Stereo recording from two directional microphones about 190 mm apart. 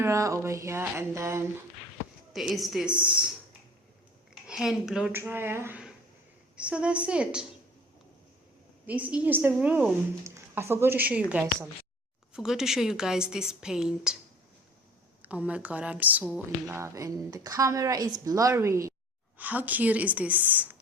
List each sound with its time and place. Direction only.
0.0 s a woman's voice: 15° right (ahead or behind)
2.3 s a woman's voice: centre (ahead or behind)
4.4 s a woman's voice: centre (ahead or behind)
8.9 s a woman's voice: 5° right (ahead or behind)
15.2 s a woman's voice: 5° right (ahead or behind)